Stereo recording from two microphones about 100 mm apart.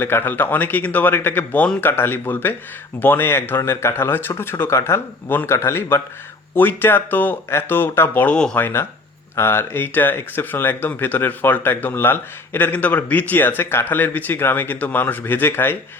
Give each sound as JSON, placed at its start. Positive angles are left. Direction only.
{"t": 0.0, "sound": "speech", "side_deg": 20}